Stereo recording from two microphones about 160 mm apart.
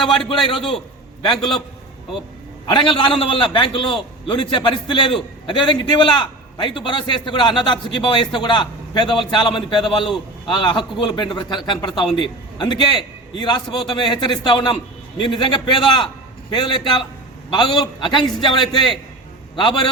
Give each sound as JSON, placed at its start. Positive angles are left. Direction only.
{"t": 1.2, "sound": "a man's voice", "side_deg": 30}
{"t": 2.6, "sound": "a man's voice", "side_deg": 30}